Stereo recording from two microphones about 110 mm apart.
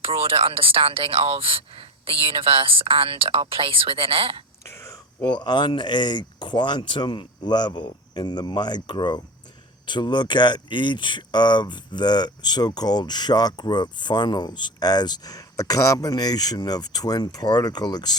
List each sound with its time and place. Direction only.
0.0 s speech: 55° right (ahead or behind)
5.2 s speech: 40° left (ahead or behind)